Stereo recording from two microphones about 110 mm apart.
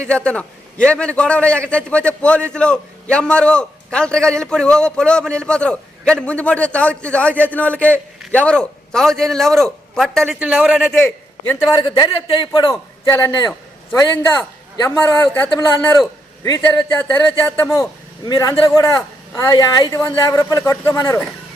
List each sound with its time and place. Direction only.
0.1 s a man's voice: 10° left (ahead or behind)
10.2 s a woman's voice: 10° right (ahead or behind)
11.7 s a man's voice: 45° left (ahead or behind)
12.6 s a man's voice: 25° left (ahead or behind)
14.8 s a man's voice: 20° left (ahead or behind)
18.3 s a man's voice: 35° left (ahead or behind)